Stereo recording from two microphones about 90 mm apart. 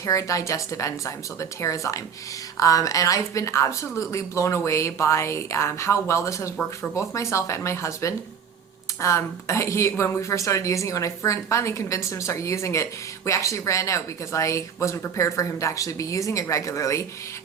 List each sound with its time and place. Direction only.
0.0 s speech: 35° left (ahead or behind)